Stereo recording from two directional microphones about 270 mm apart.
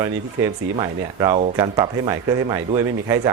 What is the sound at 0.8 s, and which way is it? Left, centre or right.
Speech, centre.